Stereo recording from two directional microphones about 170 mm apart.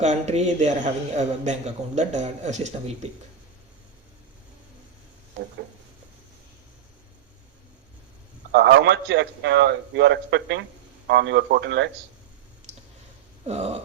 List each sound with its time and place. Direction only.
0.0 s a man's voice: 40° right (ahead or behind)
8.5 s a man's voice: 90° right
13.4 s a sound: 40° right (ahead or behind)